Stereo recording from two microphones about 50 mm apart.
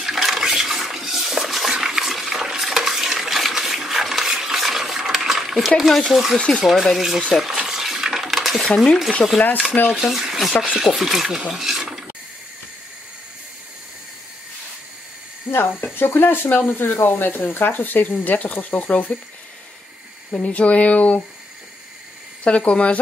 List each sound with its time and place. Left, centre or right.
0.0 s toilet flush: centre
5.8 s speech: centre
7.3 s stir: centre
8.3 s dishes: centre
8.6 s speech: centre
9.9 s speech: centre
11.5 s a sound: centre
15.5 s speech: left
20.2 s speech: left
22.4 s speech: left